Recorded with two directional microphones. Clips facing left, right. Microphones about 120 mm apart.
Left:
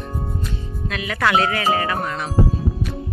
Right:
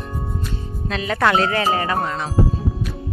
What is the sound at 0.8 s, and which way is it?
Speech, 30° right (ahead or behind).